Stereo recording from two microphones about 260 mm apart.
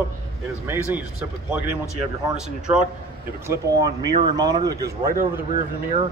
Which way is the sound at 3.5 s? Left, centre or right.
Centre.